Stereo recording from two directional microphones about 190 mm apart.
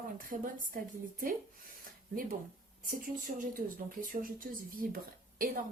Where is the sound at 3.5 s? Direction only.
45° right (ahead or behind).